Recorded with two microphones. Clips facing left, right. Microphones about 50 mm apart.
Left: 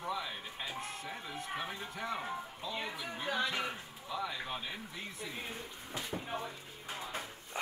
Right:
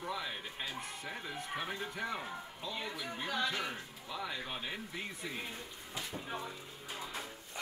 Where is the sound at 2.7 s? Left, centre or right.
Centre.